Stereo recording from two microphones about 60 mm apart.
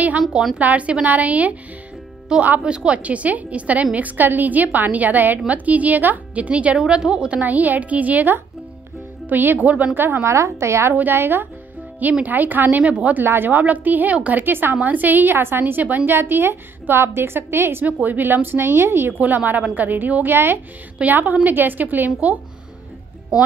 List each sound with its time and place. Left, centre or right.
0.6 s a woman's voice: right
2.3 s a woman's voice: centre; by 10.2 s right
10.2 s a woman's voice: right
11.0 s a woman's voice: right
13.2 s a woman's voice: right
14.4 s a woman's voice: right
17.8 s a woman's voice: right
19.1 s a woman's voice: right